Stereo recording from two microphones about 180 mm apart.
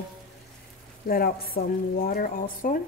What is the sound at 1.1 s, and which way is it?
A woman's voice, 55° left (ahead or behind).